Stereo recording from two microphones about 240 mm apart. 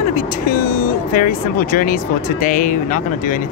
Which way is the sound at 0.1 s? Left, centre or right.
Left.